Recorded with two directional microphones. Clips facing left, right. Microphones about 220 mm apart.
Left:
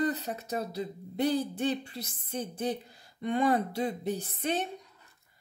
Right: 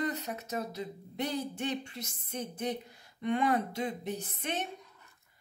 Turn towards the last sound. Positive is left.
turn(degrees=35)  # may be behind; listen again after turning